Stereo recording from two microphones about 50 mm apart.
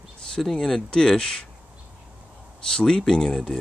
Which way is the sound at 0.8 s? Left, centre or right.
Centre.